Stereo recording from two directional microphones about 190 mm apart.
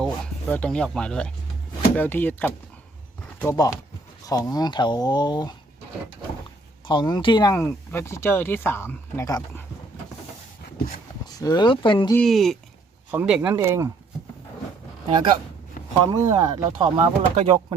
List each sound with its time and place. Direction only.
0.0 s speech: 5° left (ahead or behind)
3.5 s speech: 20° left (ahead or behind)
6.8 s speech: 25° left (ahead or behind)
7.6 s speech: 10° left (ahead or behind)
11.3 s speech: 20° left (ahead or behind)
12.1 s speech: centre (ahead or behind); by 13.9 s 15° right (ahead or behind)
16.0 s speech: 20° right (ahead or behind)